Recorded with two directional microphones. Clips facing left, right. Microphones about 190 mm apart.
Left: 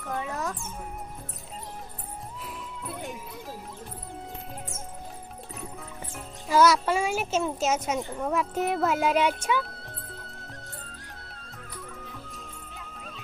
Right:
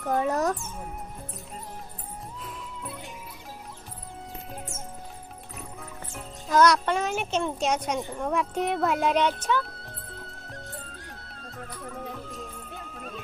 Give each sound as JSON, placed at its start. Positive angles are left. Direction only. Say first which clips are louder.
{"t": 0.1, "sound": "music", "louder": "right 7 dB", "side_deg": -40}
{"t": 6.1, "sound": "music", "louder": "even", "side_deg": 5}